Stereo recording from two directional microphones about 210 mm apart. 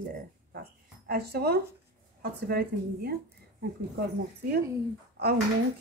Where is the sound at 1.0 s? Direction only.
50° right (ahead or behind).